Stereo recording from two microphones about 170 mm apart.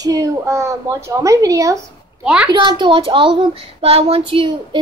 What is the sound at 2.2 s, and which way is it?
Speech, 5° right (ahead or behind).